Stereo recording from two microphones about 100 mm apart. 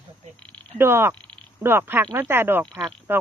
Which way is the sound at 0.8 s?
25° right (ahead or behind).